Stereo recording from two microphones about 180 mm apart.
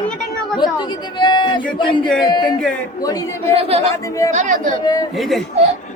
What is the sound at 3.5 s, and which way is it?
Speech, 35° right (ahead or behind).